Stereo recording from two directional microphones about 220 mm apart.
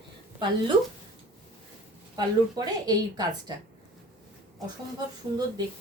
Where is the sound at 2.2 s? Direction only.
20° right (ahead or behind).